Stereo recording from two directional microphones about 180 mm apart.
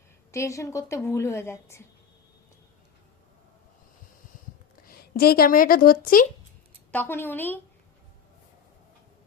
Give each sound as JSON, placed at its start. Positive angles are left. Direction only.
{"t": 0.3, "sound": "a woman's voice", "side_deg": 15}
{"t": 4.9, "sound": "speech", "side_deg": 60}
{"t": 6.9, "sound": "a woman's voice", "side_deg": 10}